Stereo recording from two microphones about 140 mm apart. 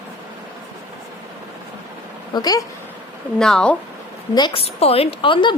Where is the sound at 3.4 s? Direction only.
5° left (ahead or behind).